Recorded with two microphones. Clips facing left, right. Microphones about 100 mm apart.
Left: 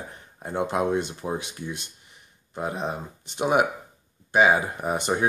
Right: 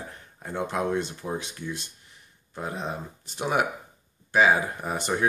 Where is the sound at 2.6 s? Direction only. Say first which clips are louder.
Left 3 dB; 15° left (ahead or behind).